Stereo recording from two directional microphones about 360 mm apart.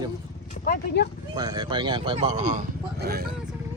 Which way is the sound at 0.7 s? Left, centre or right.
Left.